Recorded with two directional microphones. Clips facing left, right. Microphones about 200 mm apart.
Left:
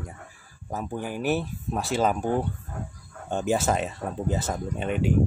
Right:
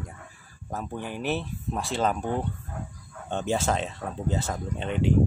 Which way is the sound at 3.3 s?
10° left (ahead or behind).